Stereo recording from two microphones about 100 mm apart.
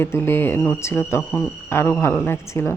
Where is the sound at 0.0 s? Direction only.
25° left (ahead or behind).